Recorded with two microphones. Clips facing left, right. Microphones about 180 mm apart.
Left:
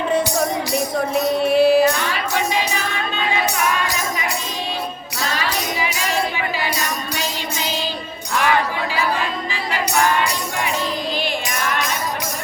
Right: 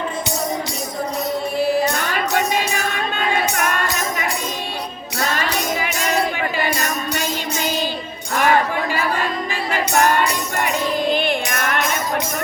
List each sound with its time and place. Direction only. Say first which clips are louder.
1.5 s music: left 6 dB; 70° left (ahead or behind)
1.9 s music: right 1 dB; 45° right (ahead or behind)
5.2 s tambourine: right 2 dB; 50° right (ahead or behind)
8.3 s a sound: right 2 dB; 45° right (ahead or behind)
11.1 s music: right 4 dB; 55° right (ahead or behind)